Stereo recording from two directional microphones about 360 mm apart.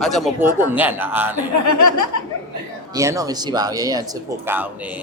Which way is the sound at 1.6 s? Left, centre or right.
Left.